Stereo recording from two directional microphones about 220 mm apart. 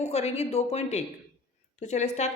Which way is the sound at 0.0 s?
30° left (ahead or behind).